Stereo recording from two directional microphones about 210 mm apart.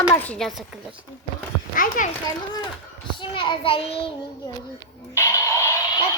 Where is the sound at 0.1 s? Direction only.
10° left (ahead or behind).